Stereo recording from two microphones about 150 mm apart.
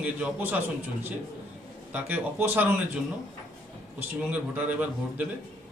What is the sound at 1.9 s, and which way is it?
Speech, 10° right (ahead or behind).